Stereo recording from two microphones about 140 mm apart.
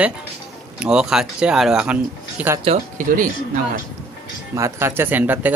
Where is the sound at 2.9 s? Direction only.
70° right (ahead or behind).